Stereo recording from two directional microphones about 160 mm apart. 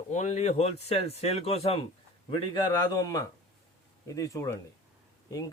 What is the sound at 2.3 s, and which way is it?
A man's voice, 25° left (ahead or behind).